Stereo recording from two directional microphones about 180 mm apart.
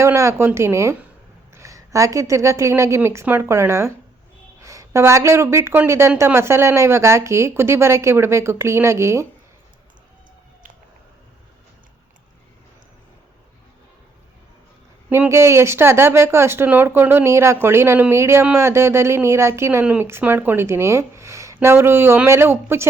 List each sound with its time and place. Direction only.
0.0 s speech: 15° right (ahead or behind)
15.1 s speech: 15° right (ahead or behind)